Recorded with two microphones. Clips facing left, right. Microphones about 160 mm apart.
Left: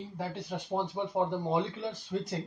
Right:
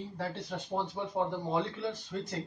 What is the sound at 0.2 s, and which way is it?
Speech, 15° left (ahead or behind).